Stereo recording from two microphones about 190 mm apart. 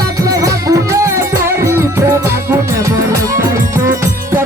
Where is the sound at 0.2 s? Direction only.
20° right (ahead or behind).